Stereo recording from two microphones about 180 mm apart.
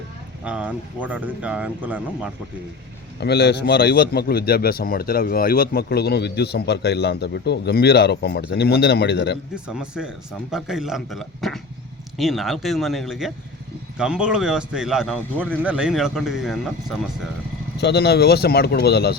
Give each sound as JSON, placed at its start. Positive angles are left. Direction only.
{"t": 0.4, "sound": "speech", "side_deg": -5}
{"t": 3.2, "sound": "a man's voice", "side_deg": 65}
{"t": 9.6, "sound": "a man's voice", "side_deg": -5}
{"t": 17.7, "sound": "a man's voice", "side_deg": 65}